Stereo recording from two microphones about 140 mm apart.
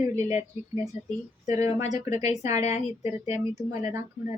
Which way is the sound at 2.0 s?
55° left (ahead or behind).